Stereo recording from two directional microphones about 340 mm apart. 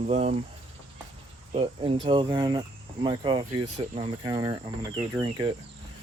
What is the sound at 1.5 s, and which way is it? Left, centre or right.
Speech, centre.